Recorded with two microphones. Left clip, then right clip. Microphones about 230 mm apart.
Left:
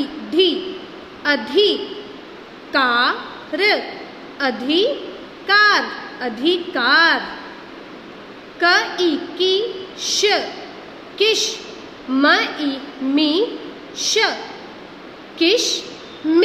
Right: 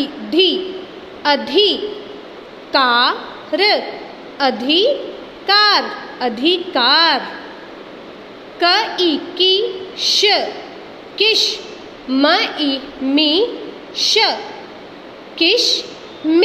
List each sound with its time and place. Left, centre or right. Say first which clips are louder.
0.0 s a woman's voice: right 2 dB; centre
8.5 s a woman's voice: right 1 dB; centre
15.3 s a woman's voice: right 3 dB; centre